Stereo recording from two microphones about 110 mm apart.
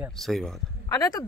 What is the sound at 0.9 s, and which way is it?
Speech, 35° left (ahead or behind).